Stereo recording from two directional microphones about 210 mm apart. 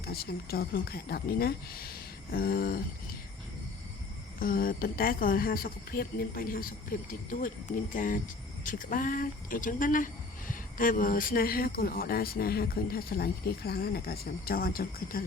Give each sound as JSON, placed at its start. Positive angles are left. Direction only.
{"t": 0.0, "sound": "speech", "side_deg": 45}
{"t": 4.4, "sound": "speech", "side_deg": 45}